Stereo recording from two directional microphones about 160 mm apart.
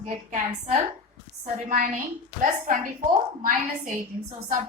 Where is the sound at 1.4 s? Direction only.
65° right (ahead or behind).